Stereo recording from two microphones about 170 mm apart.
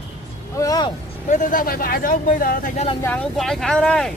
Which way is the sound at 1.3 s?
55° left (ahead or behind).